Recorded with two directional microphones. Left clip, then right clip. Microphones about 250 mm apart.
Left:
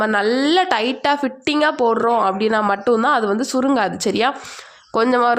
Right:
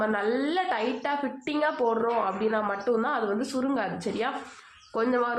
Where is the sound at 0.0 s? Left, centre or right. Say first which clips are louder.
Left 9 dB; left.